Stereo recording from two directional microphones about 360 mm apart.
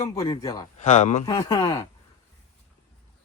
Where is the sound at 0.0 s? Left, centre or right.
Centre.